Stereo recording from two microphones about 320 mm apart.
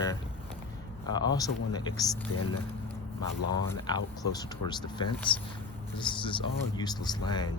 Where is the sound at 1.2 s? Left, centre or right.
Centre.